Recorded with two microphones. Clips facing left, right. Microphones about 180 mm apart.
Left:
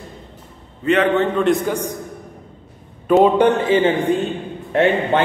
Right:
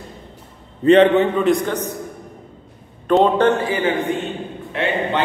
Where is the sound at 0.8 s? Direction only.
35° right (ahead or behind).